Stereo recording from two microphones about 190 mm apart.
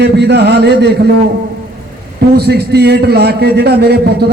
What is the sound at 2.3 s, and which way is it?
A man's voice, 60° right (ahead or behind).